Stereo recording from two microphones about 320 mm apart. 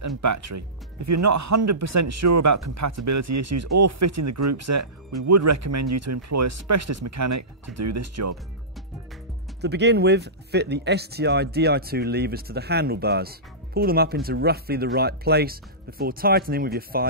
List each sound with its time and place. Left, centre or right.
0.0 s speech: right
9.6 s speech: right